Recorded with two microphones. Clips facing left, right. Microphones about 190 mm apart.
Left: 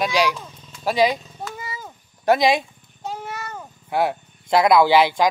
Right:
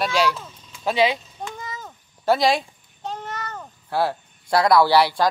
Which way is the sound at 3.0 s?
10° left (ahead or behind).